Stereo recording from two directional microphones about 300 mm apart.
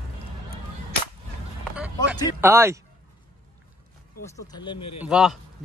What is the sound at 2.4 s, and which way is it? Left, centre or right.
Speech, centre.